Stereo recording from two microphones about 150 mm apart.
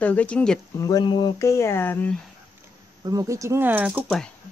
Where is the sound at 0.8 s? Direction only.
25° left (ahead or behind).